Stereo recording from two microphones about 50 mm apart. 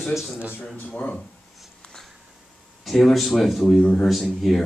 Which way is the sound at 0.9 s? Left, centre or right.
Left.